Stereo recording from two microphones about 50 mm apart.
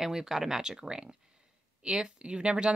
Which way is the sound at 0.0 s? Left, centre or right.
Centre.